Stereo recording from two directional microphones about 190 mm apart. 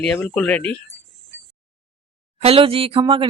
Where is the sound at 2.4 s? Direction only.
30° right (ahead or behind).